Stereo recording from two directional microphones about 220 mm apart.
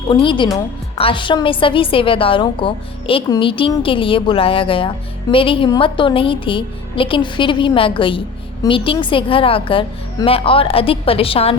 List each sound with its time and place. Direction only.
0.1 s a woman's voice: 20° left (ahead or behind)